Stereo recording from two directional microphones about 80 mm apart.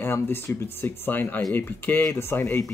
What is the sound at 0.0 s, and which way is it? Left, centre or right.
Speech, left.